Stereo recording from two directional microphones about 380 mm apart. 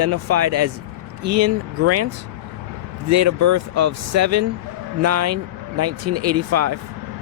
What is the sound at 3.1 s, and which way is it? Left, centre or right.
Speech, right.